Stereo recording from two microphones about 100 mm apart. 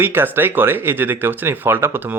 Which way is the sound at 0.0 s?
20° right (ahead or behind).